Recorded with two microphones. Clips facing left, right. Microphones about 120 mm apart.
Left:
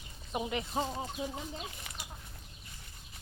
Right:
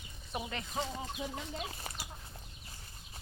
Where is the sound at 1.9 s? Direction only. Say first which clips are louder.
Right 3 dB; 35° right (ahead or behind).